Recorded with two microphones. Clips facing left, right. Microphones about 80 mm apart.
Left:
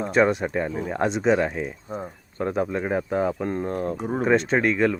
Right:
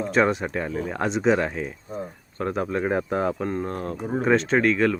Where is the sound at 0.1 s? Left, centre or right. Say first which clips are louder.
Left 2 dB; centre.